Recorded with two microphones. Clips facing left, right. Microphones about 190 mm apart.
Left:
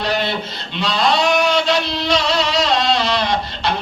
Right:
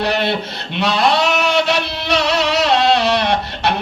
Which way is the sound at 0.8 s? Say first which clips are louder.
Right 2 dB; 65° right (ahead or behind).